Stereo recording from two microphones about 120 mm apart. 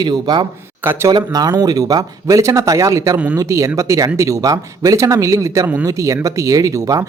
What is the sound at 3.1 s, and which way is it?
Speech, 10° right (ahead or behind).